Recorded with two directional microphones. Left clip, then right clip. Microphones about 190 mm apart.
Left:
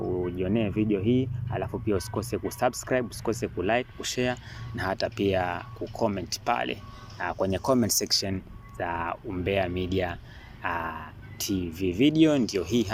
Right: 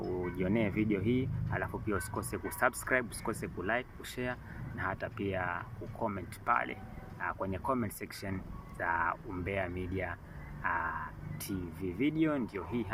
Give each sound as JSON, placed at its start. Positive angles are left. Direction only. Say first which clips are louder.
{"t": 0.2, "sound": "speech", "louder": "left 5 dB", "side_deg": 10}
{"t": 8.8, "sound": "speech", "louder": "left 2 dB", "side_deg": 20}